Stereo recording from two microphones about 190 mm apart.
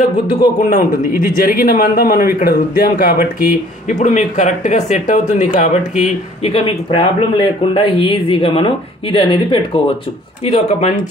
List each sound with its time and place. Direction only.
0.6 s speech: 40° left (ahead or behind)